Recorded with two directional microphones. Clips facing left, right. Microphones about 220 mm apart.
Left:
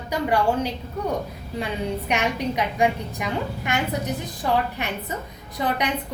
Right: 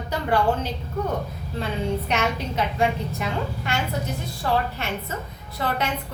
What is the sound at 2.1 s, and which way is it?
A woman's voice, 15° left (ahead or behind).